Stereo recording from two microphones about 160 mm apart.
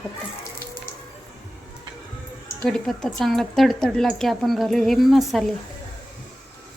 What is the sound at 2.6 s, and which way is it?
Speech, 5° left (ahead or behind).